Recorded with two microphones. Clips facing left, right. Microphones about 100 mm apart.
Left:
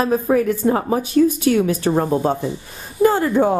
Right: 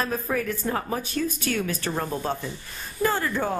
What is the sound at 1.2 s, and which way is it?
Speech, 15° left (ahead or behind).